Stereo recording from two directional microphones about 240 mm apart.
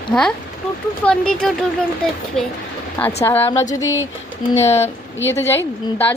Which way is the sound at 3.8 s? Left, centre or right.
Left.